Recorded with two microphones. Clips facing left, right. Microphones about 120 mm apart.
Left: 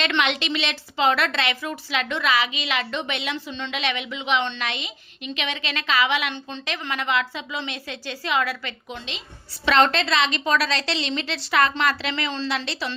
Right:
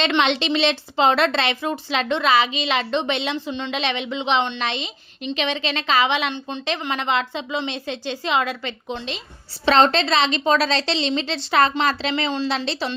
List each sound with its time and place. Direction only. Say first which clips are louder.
0.2 s a woman's voice: right 5 dB; 30° right (ahead or behind)